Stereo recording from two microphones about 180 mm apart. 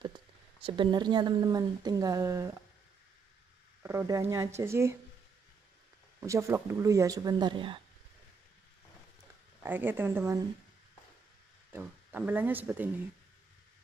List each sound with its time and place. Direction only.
0.0 s speech: 25° right (ahead or behind)
3.8 s speech: 20° right (ahead or behind)
6.2 s speech: 15° right (ahead or behind)
9.6 s speech: 10° right (ahead or behind)
11.7 s speech: 10° right (ahead or behind)